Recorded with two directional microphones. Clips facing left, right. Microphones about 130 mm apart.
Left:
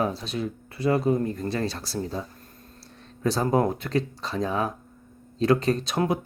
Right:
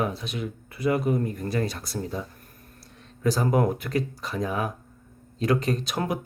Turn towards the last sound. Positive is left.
turn(degrees=25)  # may be behind; listen again after turning